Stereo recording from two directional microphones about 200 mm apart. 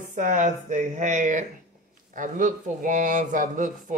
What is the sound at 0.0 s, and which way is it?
A man's voice, 40° right (ahead or behind).